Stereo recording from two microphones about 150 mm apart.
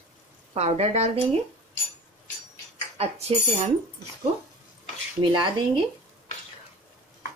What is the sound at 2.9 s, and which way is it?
Speech, 40° right (ahead or behind).